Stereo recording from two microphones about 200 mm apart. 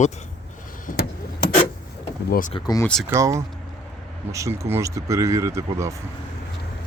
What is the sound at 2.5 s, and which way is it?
Speech, 20° left (ahead or behind).